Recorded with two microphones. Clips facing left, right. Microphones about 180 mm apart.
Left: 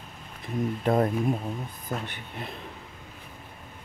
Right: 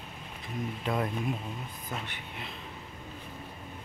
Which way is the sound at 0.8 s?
40° left (ahead or behind).